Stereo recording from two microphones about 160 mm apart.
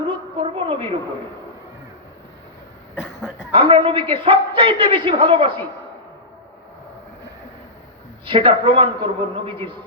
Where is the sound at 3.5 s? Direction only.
35° right (ahead or behind).